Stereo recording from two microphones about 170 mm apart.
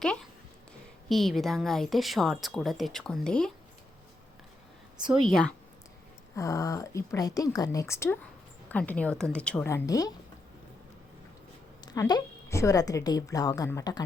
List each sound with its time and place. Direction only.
1.0 s a woman's voice: centre (ahead or behind)
5.0 s a woman's voice: centre (ahead or behind)
6.3 s a woman's voice: 20° left (ahead or behind)
11.9 s a woman's voice: 25° left (ahead or behind)